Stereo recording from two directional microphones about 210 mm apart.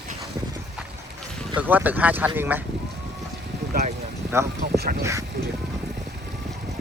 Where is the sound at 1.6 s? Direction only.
10° right (ahead or behind).